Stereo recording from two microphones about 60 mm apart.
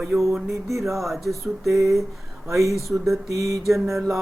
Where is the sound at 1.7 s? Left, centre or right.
Right.